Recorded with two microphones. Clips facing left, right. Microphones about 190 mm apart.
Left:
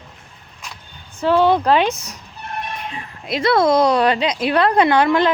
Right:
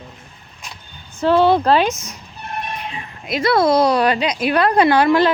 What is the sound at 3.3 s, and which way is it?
A woman's voice, 25° left (ahead or behind).